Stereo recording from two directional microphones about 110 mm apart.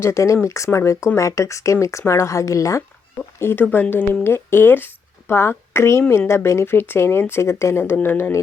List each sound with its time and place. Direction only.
0.0 s speech: 25° left (ahead or behind)